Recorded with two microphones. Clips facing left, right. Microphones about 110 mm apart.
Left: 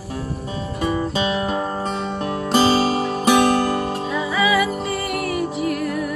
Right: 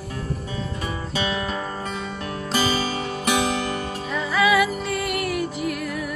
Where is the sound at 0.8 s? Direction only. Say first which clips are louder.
Left 8 dB; 30° left (ahead or behind).